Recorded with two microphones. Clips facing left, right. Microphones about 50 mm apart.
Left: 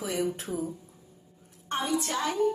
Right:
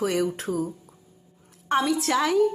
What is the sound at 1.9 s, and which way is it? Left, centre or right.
Speech, right.